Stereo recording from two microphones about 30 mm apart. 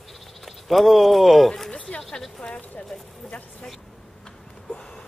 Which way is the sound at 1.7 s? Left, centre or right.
Left.